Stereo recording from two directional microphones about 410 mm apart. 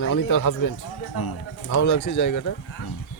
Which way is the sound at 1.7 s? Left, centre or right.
Left.